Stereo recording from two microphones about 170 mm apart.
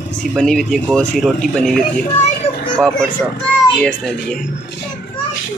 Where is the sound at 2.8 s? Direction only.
5° left (ahead or behind).